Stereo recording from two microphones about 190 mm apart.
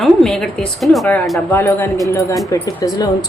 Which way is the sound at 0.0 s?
Centre (ahead or behind).